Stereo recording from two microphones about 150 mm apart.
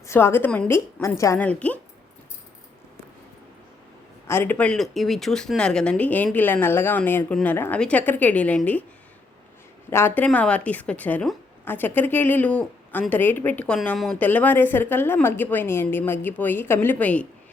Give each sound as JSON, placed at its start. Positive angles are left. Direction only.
{"t": 0.0, "sound": "a woman's voice", "side_deg": 15}
{"t": 4.3, "sound": "a woman's voice", "side_deg": 15}
{"t": 9.9, "sound": "a woman's voice", "side_deg": 15}